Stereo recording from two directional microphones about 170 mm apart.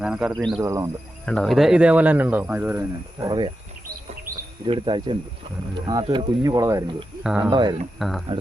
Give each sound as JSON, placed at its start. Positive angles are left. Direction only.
{"t": 0.0, "sound": "speech", "side_deg": -5}
{"t": 0.6, "sound": "speech", "side_deg": -15}
{"t": 1.2, "sound": "speech", "side_deg": 5}
{"t": 4.6, "sound": "speech", "side_deg": -30}
{"t": 7.3, "sound": "speech", "side_deg": -5}
{"t": 7.5, "sound": "speech", "side_deg": -25}
{"t": 7.9, "sound": "speech", "side_deg": 0}